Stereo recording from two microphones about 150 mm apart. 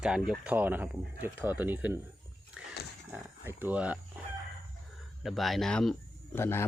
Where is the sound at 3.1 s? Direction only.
15° right (ahead or behind).